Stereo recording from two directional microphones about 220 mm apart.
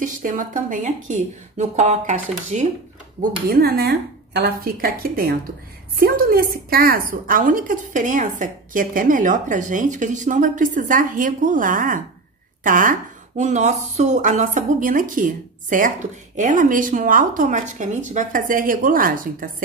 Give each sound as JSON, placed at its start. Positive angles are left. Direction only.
{"t": 0.0, "sound": "a woman's voice", "side_deg": -35}
{"t": 3.2, "sound": "a woman's voice", "side_deg": -45}